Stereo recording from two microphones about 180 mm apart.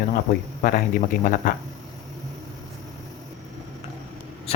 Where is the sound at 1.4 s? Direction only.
50° left (ahead or behind).